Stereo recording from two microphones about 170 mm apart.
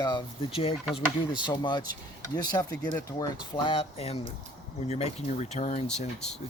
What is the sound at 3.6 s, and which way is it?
Speech, 35° left (ahead or behind).